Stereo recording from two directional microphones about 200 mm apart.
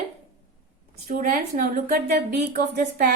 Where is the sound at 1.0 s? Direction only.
40° right (ahead or behind).